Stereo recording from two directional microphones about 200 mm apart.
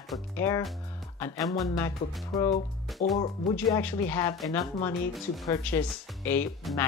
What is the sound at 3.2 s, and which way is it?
Speech, 30° left (ahead or behind).